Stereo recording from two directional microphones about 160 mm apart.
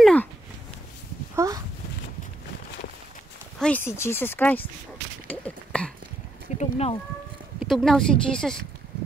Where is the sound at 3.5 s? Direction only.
10° left (ahead or behind).